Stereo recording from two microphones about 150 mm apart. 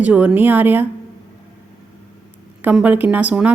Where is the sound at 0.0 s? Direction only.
10° right (ahead or behind).